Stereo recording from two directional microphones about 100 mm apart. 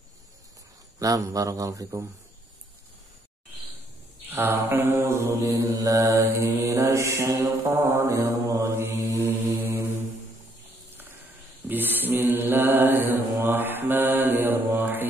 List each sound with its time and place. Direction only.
0.9 s mantra: 35° right (ahead or behind)
4.3 s mantra: 20° right (ahead or behind)
11.6 s mantra: 20° right (ahead or behind)
14.8 s music: 20° right (ahead or behind)